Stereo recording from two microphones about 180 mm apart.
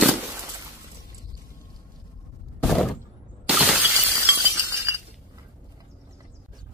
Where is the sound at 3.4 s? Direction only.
Centre (ahead or behind).